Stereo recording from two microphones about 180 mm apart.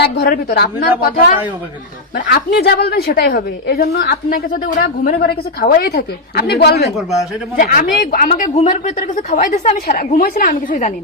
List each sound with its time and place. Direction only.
0.0 s a woman's voice: 65° left (ahead or behind)
6.9 s a man's voice: centre (ahead or behind)
7.5 s speech: 50° left (ahead or behind)
10.7 s speech: 40° left (ahead or behind)